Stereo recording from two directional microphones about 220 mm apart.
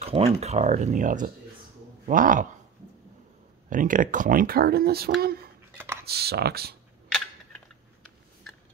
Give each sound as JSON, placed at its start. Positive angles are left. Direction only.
{"t": 0.0, "sound": "speech", "side_deg": -30}
{"t": 3.7, "sound": "speech", "side_deg": -35}